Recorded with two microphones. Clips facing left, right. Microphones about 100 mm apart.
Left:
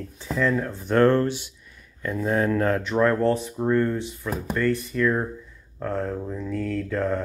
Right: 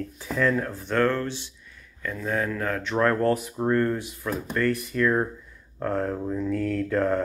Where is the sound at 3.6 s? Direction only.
15° right (ahead or behind).